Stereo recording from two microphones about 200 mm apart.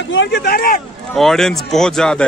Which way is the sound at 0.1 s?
60° left (ahead or behind).